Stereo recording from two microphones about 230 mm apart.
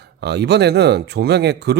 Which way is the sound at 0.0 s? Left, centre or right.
Right.